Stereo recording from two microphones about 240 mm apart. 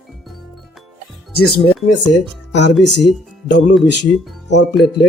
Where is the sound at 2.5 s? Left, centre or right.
Left.